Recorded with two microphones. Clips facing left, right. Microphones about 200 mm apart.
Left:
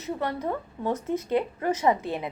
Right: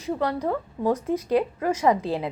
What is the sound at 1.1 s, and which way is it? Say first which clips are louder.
Speech: right 3 dB; 25° left (ahead or behind).